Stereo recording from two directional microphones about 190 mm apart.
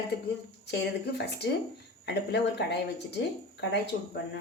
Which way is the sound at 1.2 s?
60° left (ahead or behind).